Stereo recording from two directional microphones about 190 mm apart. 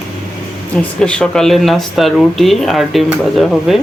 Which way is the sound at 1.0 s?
5° left (ahead or behind).